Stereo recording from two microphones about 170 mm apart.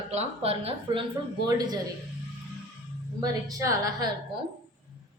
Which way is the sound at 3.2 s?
20° right (ahead or behind).